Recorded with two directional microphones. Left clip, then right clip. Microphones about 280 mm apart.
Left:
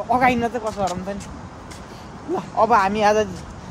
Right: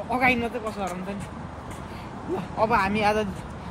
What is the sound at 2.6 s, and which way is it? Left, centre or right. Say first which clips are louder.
Speech: left 6 dB; centre.